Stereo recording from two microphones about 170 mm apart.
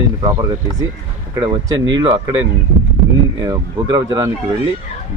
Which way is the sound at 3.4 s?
20° right (ahead or behind).